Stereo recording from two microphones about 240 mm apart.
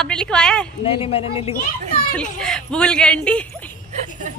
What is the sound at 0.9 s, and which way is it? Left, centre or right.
Speech, left.